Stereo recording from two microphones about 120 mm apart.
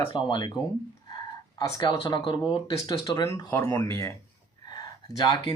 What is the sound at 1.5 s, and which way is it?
Speech, 35° left (ahead or behind).